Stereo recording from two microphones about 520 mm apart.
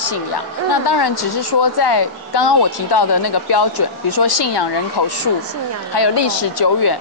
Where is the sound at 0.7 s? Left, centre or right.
Left.